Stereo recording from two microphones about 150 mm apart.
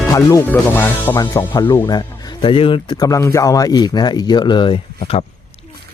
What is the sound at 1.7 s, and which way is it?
Speech, 25° left (ahead or behind).